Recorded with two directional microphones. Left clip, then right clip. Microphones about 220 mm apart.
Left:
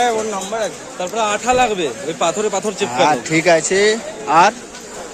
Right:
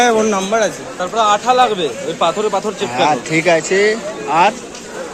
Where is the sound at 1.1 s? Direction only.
50° left (ahead or behind).